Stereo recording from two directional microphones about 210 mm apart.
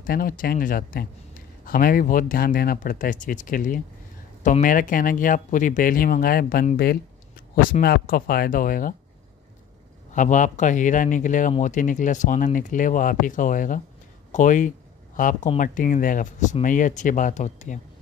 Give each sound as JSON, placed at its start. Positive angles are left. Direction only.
{"t": 0.0, "sound": "speech", "side_deg": 45}
{"t": 10.1, "sound": "speech", "side_deg": 35}